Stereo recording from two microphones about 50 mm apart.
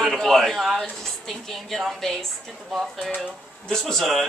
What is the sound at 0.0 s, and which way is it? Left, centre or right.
A man's voice, centre.